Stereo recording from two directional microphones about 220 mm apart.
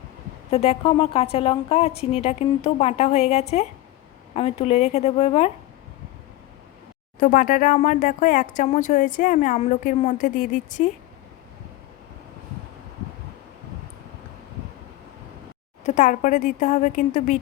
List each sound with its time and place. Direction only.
0.5 s a woman's voice: 25° left (ahead or behind)
7.2 s speech: 35° left (ahead or behind)
15.8 s speech: 35° left (ahead or behind)